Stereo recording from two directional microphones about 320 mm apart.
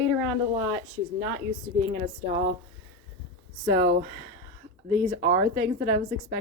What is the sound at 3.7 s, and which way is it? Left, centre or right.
Speech, right.